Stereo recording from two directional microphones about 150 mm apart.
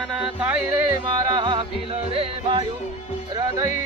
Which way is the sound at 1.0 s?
30° right (ahead or behind).